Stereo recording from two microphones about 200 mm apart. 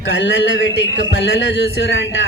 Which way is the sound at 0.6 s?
70° left (ahead or behind).